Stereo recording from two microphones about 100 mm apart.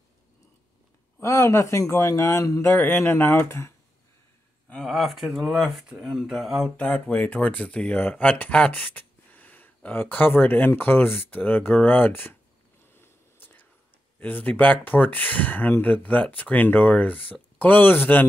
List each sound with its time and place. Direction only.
1.2 s a man's voice: 30° left (ahead or behind)
4.8 s speech: centre (ahead or behind)
6.9 s speech: 15° left (ahead or behind)
12.9 s a sound: 20° left (ahead or behind)
14.2 s speech: 15° left (ahead or behind)